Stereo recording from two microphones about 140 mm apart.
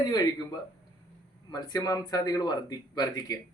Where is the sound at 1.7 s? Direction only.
30° left (ahead or behind).